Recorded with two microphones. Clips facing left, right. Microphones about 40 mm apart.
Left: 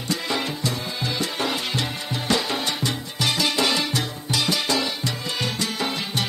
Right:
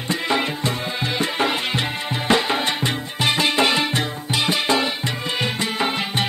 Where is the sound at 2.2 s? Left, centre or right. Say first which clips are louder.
Right 5 dB; right.